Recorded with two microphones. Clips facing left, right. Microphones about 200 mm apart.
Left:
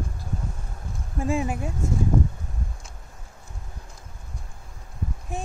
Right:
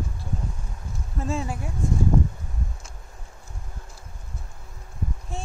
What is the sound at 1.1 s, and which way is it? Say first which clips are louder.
Speech: left 4 dB; 15° left (ahead or behind).